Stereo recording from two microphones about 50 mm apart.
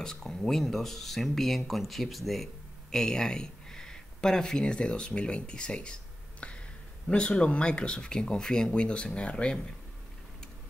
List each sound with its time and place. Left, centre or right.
0.0 s speech: centre
6.4 s a sound: left
7.1 s speech: left